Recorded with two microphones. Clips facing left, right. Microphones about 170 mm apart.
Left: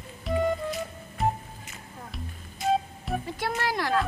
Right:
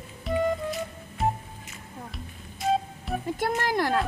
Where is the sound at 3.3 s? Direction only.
45° right (ahead or behind).